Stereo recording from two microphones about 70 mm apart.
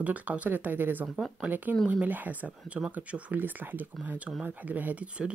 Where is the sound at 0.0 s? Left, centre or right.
Right.